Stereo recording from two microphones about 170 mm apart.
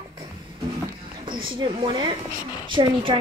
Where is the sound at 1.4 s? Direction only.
30° right (ahead or behind).